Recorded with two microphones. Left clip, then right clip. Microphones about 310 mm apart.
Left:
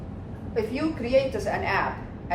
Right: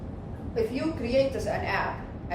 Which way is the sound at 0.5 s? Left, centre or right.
Left.